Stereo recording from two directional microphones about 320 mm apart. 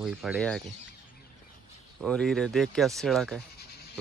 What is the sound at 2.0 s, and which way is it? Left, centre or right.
Speech, centre.